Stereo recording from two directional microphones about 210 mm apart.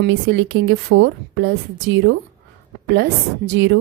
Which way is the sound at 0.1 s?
60° right (ahead or behind).